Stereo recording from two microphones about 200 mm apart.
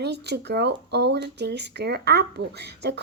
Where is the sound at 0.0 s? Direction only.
55° right (ahead or behind).